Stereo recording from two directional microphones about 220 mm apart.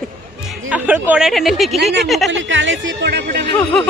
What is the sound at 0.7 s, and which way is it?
Speech, 5° right (ahead or behind).